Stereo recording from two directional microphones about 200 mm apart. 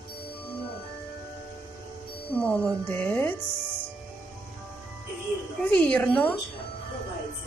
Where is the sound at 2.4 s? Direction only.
5° left (ahead or behind).